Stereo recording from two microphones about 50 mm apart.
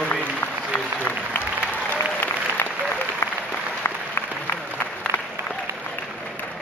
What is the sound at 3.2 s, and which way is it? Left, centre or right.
Applause, left.